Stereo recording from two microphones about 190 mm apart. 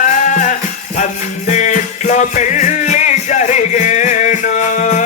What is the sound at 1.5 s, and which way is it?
Music, 40° left (ahead or behind).